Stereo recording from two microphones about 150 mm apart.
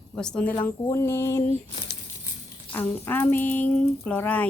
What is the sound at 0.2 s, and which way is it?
Speech, 5° left (ahead or behind).